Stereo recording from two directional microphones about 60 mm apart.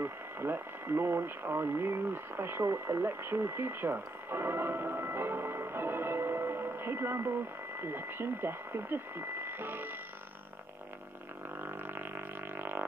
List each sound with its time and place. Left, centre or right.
0.0 s speech: right
11.6 s music: right